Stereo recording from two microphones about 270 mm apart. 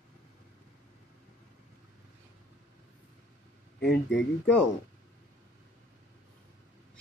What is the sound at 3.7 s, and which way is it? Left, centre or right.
Speech, left.